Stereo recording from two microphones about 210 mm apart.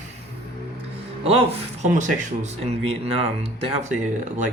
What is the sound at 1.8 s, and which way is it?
Speech, 35° right (ahead or behind).